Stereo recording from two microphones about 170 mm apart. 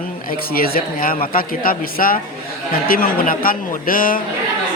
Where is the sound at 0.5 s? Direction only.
60° left (ahead or behind).